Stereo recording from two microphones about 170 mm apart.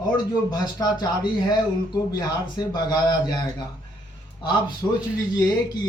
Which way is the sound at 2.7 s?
25° left (ahead or behind).